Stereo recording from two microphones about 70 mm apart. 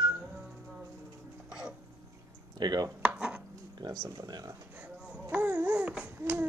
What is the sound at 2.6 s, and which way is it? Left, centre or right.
Speech, right.